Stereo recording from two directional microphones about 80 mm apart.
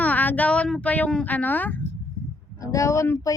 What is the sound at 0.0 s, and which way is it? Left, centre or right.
Speech, left.